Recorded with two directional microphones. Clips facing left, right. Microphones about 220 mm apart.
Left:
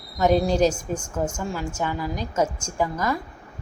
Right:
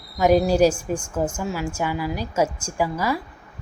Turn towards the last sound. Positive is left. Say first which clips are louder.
# right 1 dB
turn(degrees=-10)  # may be behind; listen again after turning